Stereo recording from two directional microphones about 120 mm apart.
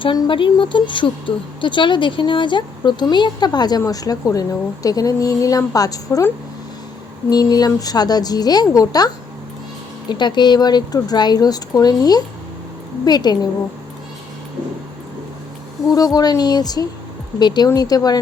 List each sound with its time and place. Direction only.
0.0 s speech: 45° left (ahead or behind)
15.9 s speech: 30° left (ahead or behind)